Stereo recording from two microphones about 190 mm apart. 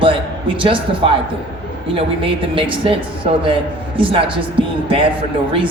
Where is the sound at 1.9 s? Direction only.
30° right (ahead or behind).